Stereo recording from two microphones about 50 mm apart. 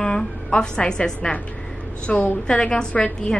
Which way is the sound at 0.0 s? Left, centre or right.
Centre.